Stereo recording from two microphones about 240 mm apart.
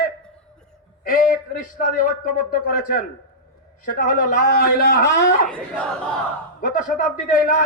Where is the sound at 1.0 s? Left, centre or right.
Left.